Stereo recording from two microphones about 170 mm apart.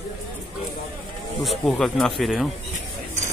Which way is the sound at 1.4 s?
Centre (ahead or behind).